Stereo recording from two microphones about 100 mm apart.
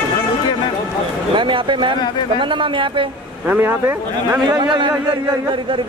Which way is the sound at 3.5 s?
20° right (ahead or behind).